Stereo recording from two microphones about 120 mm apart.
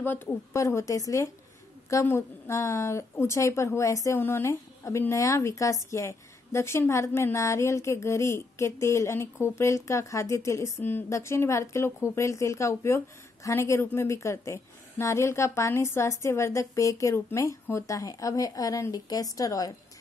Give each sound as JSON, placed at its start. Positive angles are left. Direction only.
{"t": 0.0, "sound": "a woman's voice", "side_deg": 15}